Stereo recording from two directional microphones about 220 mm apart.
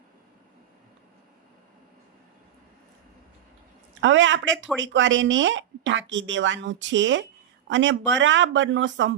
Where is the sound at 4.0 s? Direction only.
60° right (ahead or behind).